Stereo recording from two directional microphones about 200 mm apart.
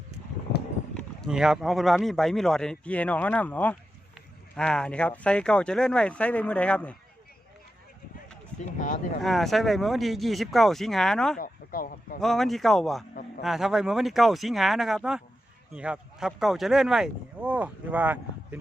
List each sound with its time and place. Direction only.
0.9 s speech: centre (ahead or behind)
8.5 s a sound: 5° left (ahead or behind)
9.2 s speech: centre (ahead or behind)
11.3 s speech: 45° left (ahead or behind)
12.2 s speech: centre (ahead or behind)